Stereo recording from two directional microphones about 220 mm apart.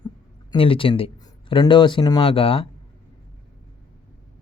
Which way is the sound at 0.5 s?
25° left (ahead or behind).